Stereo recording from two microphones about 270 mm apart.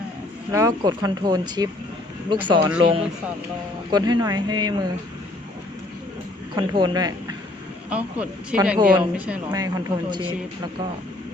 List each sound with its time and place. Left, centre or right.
0.5 s speech: centre
6.6 s speech: centre
7.9 s speech: centre